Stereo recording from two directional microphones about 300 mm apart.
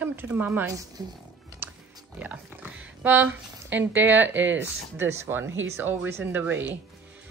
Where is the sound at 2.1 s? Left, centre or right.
Centre.